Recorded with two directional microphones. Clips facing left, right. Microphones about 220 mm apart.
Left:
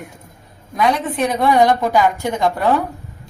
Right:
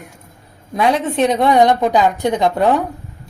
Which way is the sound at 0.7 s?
25° right (ahead or behind).